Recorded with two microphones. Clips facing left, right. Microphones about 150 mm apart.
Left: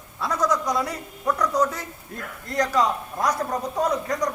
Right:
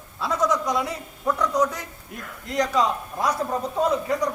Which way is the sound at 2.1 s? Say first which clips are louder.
Right 1 dB; 20° right (ahead or behind).